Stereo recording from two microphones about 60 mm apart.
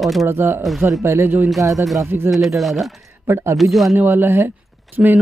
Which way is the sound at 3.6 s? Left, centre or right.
Centre.